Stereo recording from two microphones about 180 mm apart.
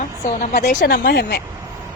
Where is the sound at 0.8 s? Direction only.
55° left (ahead or behind).